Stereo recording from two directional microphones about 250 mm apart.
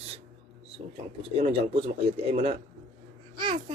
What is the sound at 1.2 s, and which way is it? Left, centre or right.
A man's voice, right.